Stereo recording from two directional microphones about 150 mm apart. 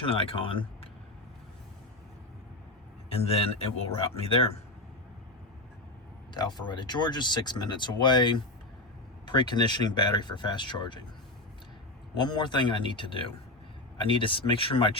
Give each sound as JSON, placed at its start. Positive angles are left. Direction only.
{"t": 0.0, "sound": "speech", "side_deg": 35}
{"t": 3.1, "sound": "speech", "side_deg": 40}
{"t": 6.3, "sound": "speech", "side_deg": 30}
{"t": 12.1, "sound": "speech", "side_deg": 30}